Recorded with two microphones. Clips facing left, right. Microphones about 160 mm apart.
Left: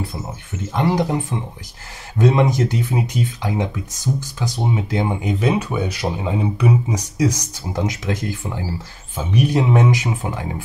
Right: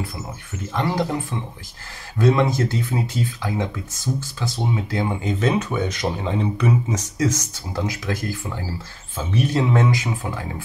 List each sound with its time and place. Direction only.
0.7 s speech: 20° left (ahead or behind)